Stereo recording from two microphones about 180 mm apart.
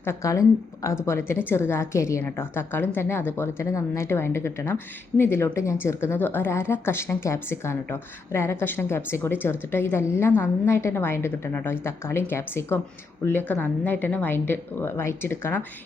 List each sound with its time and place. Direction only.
0.0 s a woman's voice: 15° left (ahead or behind)